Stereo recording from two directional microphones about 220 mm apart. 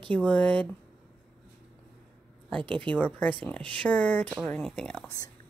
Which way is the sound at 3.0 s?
5° left (ahead or behind).